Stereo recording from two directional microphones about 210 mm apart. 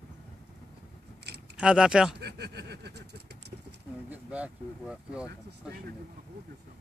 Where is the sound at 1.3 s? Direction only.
50° right (ahead or behind).